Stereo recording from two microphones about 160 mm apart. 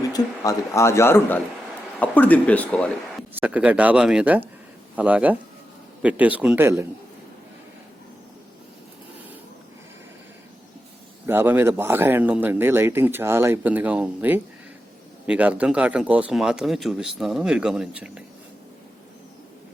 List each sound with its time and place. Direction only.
0.1 s a man's voice: 20° left (ahead or behind)
3.4 s speech: 10° right (ahead or behind)
11.3 s speech: 15° right (ahead or behind)